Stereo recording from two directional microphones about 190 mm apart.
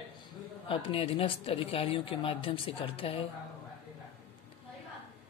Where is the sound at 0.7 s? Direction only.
30° left (ahead or behind).